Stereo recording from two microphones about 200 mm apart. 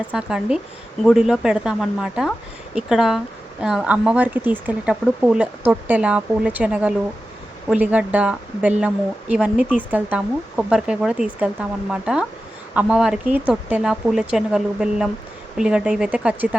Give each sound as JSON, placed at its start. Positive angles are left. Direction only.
{"t": 0.1, "sound": "speech", "side_deg": -5}